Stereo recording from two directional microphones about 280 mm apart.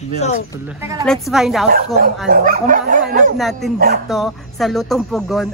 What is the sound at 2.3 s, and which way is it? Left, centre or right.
Speech, right.